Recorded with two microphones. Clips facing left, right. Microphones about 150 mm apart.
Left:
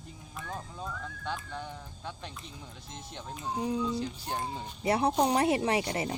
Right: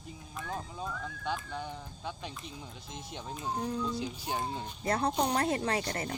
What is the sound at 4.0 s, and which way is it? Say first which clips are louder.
Speech: even; centre (ahead or behind).